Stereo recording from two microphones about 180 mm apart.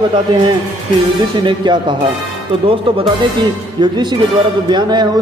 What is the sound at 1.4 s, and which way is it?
Speech, 25° right (ahead or behind).